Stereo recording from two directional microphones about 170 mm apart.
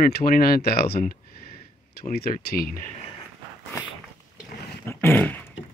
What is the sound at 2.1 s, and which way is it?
Speech, 65° left (ahead or behind).